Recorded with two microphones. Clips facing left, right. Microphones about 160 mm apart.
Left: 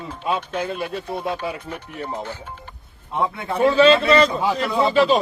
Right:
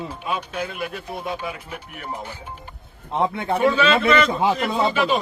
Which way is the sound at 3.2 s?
25° right (ahead or behind).